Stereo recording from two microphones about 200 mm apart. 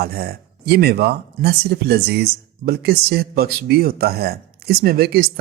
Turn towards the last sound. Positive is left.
turn(degrees=-50)  # may be behind; listen again after turning